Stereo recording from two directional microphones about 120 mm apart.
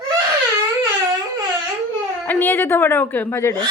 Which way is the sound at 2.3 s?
15° left (ahead or behind).